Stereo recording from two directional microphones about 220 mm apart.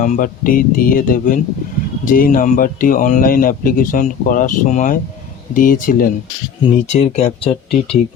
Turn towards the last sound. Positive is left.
turn(degrees=25)  # may be behind; listen again after turning